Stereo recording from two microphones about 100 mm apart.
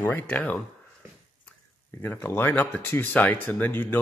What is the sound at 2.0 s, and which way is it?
Speech, 25° left (ahead or behind).